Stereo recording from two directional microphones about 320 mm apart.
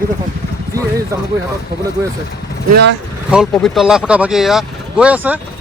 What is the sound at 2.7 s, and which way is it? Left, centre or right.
Speech, right.